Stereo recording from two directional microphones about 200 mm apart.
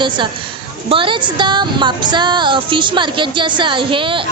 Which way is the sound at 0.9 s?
25° right (ahead or behind).